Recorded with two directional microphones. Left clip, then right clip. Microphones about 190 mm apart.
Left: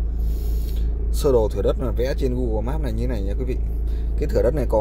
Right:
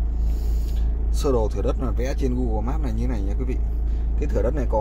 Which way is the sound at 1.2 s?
10° left (ahead or behind).